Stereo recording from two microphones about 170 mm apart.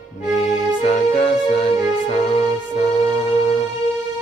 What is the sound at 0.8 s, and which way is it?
Music, 35° left (ahead or behind).